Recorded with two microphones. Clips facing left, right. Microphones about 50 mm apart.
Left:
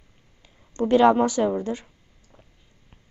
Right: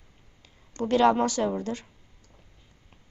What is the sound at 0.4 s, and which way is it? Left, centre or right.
Speech, left.